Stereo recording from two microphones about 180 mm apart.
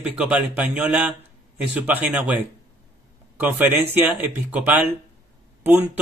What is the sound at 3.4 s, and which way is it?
Speech, 10° right (ahead or behind).